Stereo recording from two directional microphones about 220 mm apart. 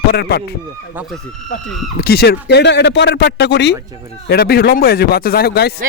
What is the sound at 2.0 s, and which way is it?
Speech, 45° left (ahead or behind).